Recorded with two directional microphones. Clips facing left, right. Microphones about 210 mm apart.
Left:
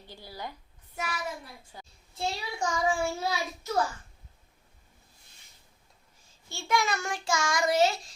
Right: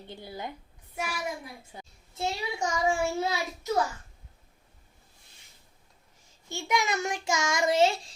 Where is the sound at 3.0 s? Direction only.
20° right (ahead or behind).